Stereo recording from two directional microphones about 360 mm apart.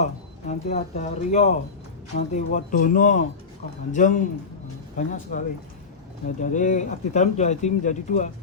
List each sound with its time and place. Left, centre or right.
0.0 s speech: centre